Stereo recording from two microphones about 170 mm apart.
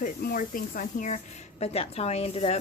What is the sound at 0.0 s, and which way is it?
Speech, 60° left (ahead or behind).